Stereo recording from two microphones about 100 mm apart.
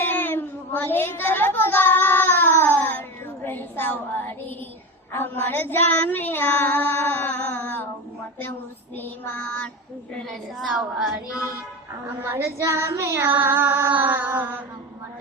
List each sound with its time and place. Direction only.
0.0 s child singing: 20° left (ahead or behind)
9.0 s child singing: 10° left (ahead or behind)
10.2 s a woman's voice: centre (ahead or behind)
12.2 s child singing: 25° right (ahead or behind)